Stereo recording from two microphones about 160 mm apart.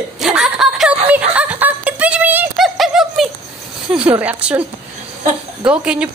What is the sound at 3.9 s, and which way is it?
Speech, 10° right (ahead or behind).